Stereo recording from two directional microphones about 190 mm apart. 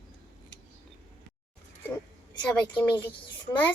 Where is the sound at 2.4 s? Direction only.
10° left (ahead or behind).